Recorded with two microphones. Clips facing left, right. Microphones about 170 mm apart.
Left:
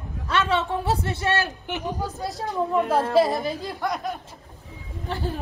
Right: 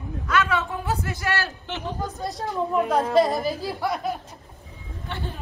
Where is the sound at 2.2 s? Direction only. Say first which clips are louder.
Right 1 dB; centre (ahead or behind).